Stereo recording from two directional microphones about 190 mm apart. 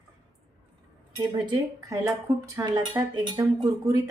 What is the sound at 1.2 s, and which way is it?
A woman's voice, 20° right (ahead or behind).